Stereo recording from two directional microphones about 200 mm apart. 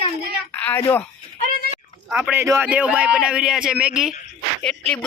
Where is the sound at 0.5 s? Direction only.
10° left (ahead or behind).